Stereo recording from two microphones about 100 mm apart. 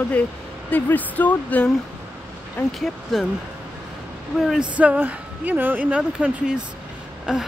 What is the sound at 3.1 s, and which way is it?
Speech, centre (ahead or behind).